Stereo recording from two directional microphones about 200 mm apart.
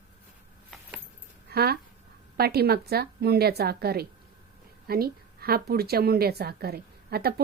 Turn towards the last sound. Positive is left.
turn(degrees=-50)  # may be behind; listen again after turning